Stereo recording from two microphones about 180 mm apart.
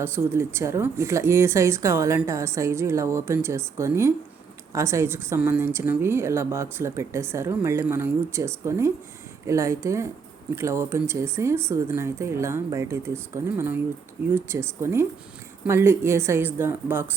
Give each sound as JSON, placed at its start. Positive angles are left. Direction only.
{"t": 0.0, "sound": "a woman's voice", "side_deg": -15}